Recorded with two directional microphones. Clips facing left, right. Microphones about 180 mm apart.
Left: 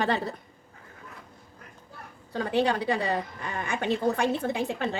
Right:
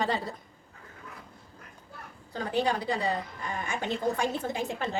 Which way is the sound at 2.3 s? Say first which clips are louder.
Left 3 dB; 65° left (ahead or behind).